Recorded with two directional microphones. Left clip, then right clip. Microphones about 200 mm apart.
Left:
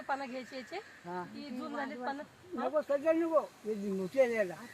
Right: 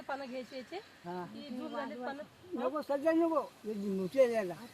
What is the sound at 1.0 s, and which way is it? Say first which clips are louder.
Speech: left 1 dB; 45° right (ahead or behind).